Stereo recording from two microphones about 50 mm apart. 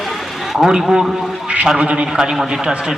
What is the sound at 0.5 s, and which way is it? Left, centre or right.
A man's voice, centre.